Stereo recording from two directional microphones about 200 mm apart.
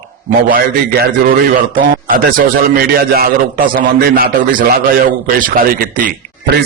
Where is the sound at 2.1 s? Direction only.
45° right (ahead or behind).